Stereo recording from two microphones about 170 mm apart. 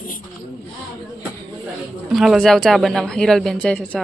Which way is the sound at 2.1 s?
Centre (ahead or behind).